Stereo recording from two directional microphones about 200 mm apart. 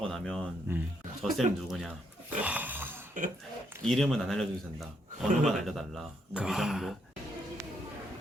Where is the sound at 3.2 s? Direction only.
40° right (ahead or behind).